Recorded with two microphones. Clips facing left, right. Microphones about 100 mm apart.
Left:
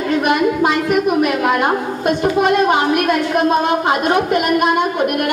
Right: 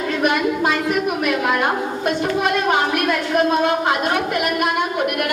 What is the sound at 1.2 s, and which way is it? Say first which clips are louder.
A woman's voice: left 3 dB; 20° left (ahead or behind).